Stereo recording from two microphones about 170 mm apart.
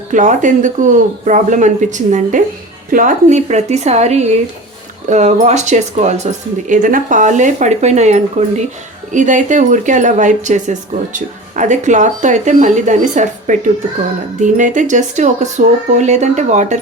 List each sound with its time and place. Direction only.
0.1 s a woman's voice: 50° right (ahead or behind)